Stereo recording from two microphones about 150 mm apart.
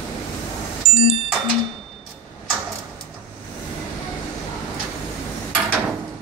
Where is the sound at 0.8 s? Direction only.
40° right (ahead or behind).